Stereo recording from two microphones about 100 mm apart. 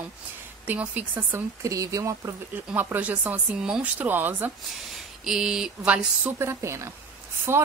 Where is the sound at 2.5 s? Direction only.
20° right (ahead or behind).